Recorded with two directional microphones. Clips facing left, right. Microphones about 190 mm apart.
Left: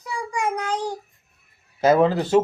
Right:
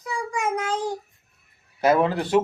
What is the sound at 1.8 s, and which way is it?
Speech, 30° left (ahead or behind).